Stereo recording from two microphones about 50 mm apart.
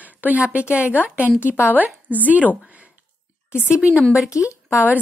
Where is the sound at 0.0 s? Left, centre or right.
Right.